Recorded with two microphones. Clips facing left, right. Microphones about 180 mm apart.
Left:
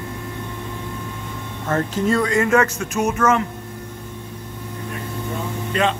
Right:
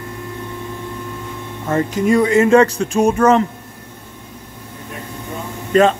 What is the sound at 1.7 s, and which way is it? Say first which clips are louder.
Speech: right 4 dB; 10° right (ahead or behind).